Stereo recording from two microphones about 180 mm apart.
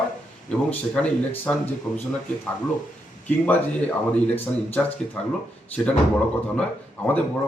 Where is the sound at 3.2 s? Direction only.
10° left (ahead or behind).